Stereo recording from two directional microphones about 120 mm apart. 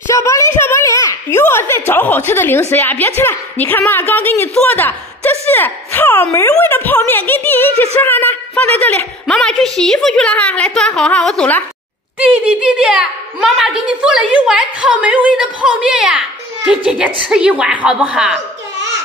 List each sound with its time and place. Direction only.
0.1 s a sound: 25° left (ahead or behind)
2.7 s a woman's voice: 15° left (ahead or behind)
12.2 s a woman's voice: 10° right (ahead or behind)